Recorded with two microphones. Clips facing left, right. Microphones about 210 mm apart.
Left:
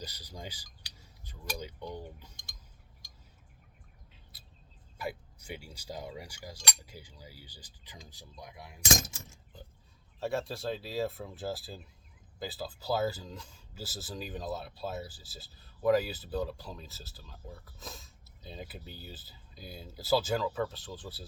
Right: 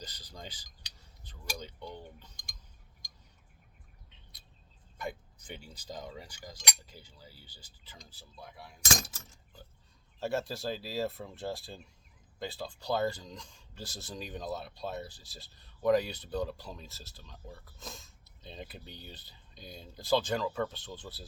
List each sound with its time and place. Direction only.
0.0 s a sound: 10° left (ahead or behind)
1.5 s speech: 10° left (ahead or behind)
4.1 s bird: 5° left (ahead or behind)
4.9 s speech: 10° left (ahead or behind)
10.2 s speech: centre (ahead or behind)